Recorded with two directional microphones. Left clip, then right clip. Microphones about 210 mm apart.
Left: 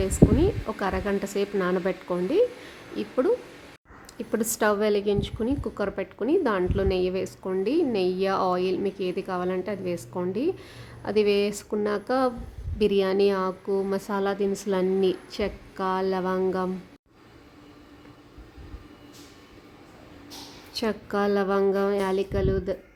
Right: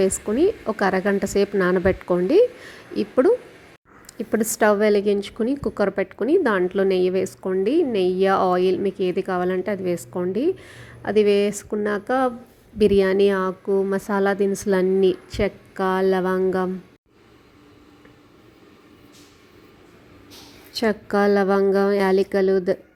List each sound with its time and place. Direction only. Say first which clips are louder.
0.0 s a woman's voice: right 3 dB; 20° right (ahead or behind)
20.7 s a woman's voice: right 6 dB; 20° right (ahead or behind)